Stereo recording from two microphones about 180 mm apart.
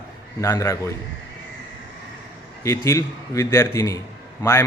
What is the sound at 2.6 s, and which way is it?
Speech, 15° left (ahead or behind).